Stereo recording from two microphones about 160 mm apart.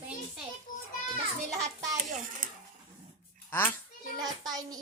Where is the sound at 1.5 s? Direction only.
20° right (ahead or behind).